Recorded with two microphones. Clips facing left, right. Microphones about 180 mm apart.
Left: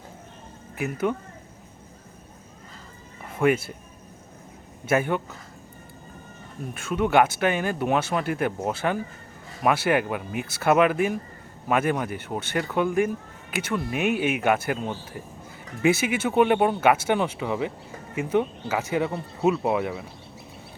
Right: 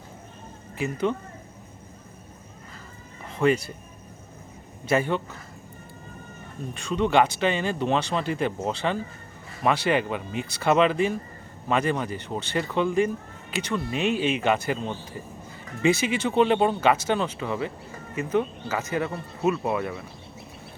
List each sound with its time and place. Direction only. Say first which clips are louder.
1.1 s speech: even; 10° left (ahead or behind)
3.3 s speech: even; 5° left (ahead or behind)
4.9 s speech: even; 5° left (ahead or behind)
6.7 s speech: left 1 dB; 5° left (ahead or behind)